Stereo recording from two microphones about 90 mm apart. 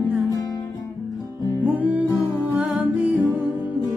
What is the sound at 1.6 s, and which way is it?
Music, 15° right (ahead or behind).